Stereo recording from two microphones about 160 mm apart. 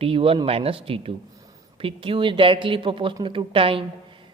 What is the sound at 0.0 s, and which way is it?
Speech, 35° right (ahead or behind).